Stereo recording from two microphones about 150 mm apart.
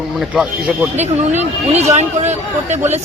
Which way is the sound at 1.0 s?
45° right (ahead or behind).